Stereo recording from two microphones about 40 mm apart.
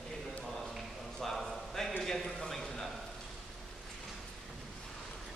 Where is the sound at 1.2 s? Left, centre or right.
Centre.